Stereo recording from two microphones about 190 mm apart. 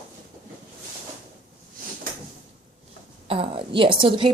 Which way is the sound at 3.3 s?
30° right (ahead or behind).